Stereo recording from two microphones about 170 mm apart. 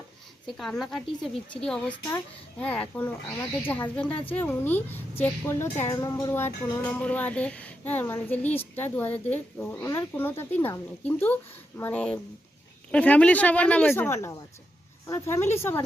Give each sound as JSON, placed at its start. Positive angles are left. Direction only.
{"t": 0.5, "sound": "a woman's voice", "side_deg": 0}